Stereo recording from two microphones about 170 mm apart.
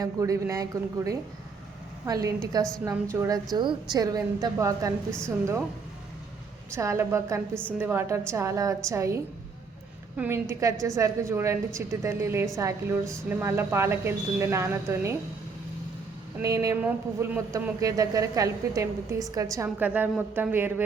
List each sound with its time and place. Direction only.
0.0 s a woman's voice: 20° right (ahead or behind)
6.7 s a woman's voice: 15° right (ahead or behind)
16.4 s a woman's voice: 20° right (ahead or behind)